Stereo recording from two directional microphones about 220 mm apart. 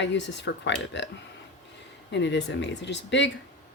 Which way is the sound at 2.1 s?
55° left (ahead or behind).